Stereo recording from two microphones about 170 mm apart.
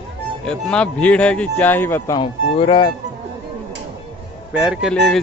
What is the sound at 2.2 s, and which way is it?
Speech, 30° left (ahead or behind).